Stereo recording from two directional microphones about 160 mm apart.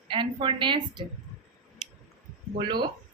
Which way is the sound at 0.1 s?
30° right (ahead or behind).